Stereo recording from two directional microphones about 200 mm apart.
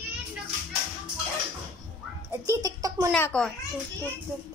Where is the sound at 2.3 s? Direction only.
15° right (ahead or behind).